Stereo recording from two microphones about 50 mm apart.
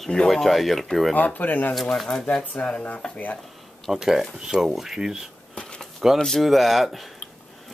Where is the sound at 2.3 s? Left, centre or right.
Left.